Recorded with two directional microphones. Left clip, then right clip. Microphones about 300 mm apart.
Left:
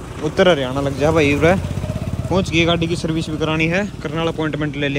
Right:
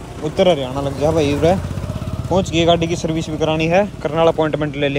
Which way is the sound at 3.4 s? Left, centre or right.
Centre.